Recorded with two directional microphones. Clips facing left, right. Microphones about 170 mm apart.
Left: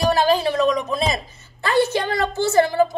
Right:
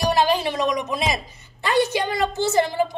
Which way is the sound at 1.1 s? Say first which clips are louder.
Left 1 dB; 15° right (ahead or behind).